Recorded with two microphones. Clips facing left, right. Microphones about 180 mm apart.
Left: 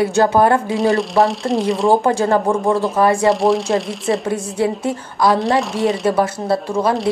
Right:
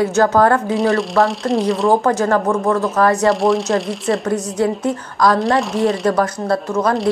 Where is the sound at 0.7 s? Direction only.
Centre (ahead or behind).